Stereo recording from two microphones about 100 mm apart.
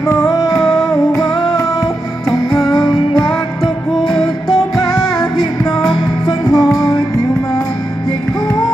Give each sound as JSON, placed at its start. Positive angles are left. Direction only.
{"t": 0.0, "sound": "music", "side_deg": 30}
{"t": 1.3, "sound": "music", "side_deg": 0}
{"t": 2.7, "sound": "music", "side_deg": 40}
{"t": 3.6, "sound": "music", "side_deg": 5}
{"t": 5.9, "sound": "music", "side_deg": 40}